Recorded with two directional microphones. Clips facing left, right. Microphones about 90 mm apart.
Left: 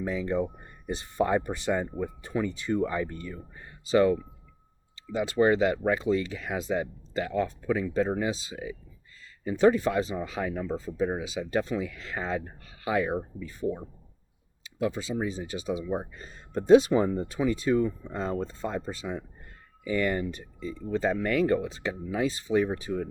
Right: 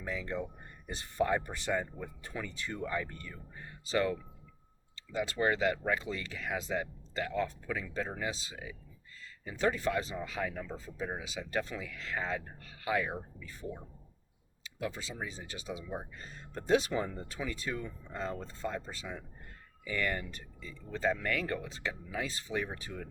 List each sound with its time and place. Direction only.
0.0 s speech: 20° left (ahead or behind)
14.6 s a sound: 20° left (ahead or behind)
15.1 s speech: 25° left (ahead or behind)